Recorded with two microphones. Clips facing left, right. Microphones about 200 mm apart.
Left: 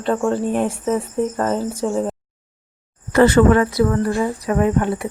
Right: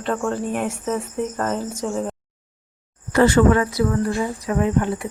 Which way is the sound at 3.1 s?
60° left (ahead or behind).